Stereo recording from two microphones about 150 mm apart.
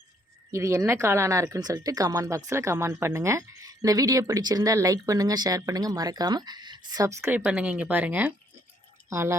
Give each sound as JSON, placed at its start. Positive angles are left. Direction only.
{"t": 0.5, "sound": "speech", "side_deg": -20}